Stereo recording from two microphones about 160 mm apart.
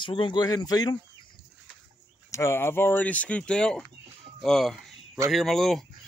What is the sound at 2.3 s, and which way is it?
Speech, 15° left (ahead or behind).